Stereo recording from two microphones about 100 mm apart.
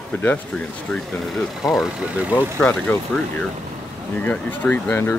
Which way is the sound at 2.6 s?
15° left (ahead or behind).